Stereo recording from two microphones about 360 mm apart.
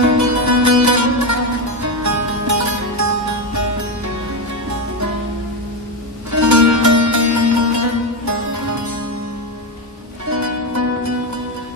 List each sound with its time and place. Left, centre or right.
0.0 s music: right
6.3 s music: right
10.2 s music: right